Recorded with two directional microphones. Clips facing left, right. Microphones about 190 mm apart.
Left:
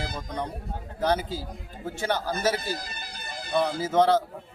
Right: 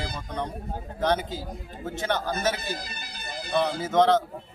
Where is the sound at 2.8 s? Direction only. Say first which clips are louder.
Right 1 dB; 50° left (ahead or behind).